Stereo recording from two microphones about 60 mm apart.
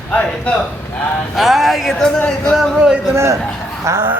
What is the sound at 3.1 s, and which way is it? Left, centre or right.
Speech, right.